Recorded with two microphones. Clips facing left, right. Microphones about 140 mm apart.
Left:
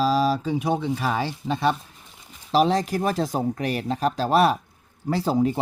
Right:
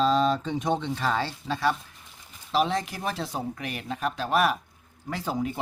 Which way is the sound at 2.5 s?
35° left (ahead or behind).